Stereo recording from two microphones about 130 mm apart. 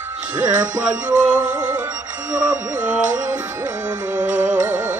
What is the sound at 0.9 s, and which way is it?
Music, 10° right (ahead or behind).